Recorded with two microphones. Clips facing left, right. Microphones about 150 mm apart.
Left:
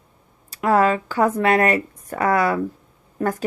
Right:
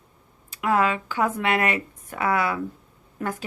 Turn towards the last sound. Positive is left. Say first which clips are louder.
# left 6 dB
turn(degrees=35)  # may be behind; listen again after turning